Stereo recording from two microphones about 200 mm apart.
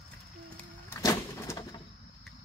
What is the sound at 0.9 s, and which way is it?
Vehicle, 15° left (ahead or behind).